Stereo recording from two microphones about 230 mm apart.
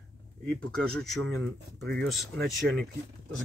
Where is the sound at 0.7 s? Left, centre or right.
Centre.